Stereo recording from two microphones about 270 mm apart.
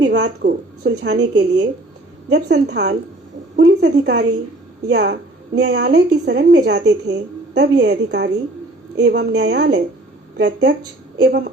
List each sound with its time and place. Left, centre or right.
0.0 s a woman's voice: right
2.3 s a woman's voice: right